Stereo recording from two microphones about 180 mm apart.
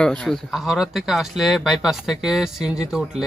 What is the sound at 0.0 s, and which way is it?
Speech, 5° left (ahead or behind).